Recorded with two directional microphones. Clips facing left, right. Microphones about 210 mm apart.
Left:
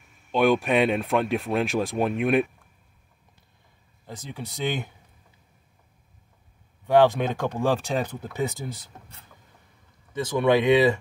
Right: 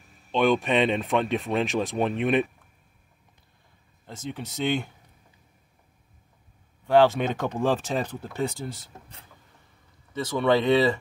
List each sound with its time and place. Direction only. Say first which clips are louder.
0.3 s speech: left 1 dB; 10° left (ahead or behind)
1.7 s speech: left 1 dB; 10° left (ahead or behind)
4.0 s speech: right 2 dB; 10° left (ahead or behind)
7.0 s speech: left 1 dB; 15° left (ahead or behind)
10.1 s speech: left 1 dB; 15° left (ahead or behind)